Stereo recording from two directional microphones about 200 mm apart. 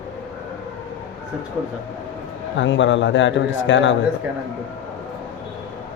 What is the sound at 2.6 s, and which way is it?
A man's voice, 70° left (ahead or behind).